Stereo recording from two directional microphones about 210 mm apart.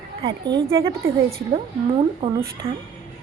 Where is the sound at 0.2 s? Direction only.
20° right (ahead or behind).